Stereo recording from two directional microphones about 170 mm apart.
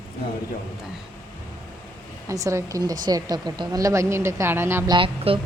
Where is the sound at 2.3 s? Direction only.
20° right (ahead or behind).